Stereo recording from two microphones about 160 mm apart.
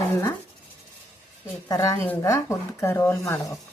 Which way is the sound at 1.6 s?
20° left (ahead or behind).